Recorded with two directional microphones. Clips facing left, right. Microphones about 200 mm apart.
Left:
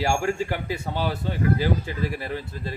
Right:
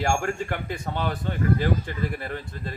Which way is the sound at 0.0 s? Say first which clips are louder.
Left 2 dB; 5° left (ahead or behind).